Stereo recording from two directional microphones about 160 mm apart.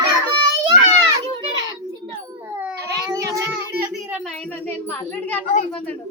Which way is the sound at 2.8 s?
20° right (ahead or behind).